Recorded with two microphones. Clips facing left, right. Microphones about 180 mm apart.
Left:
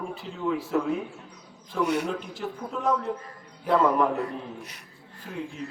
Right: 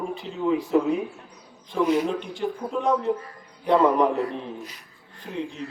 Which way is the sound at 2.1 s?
5° left (ahead or behind).